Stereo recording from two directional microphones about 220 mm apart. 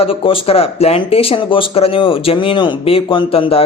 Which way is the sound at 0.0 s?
25° left (ahead or behind).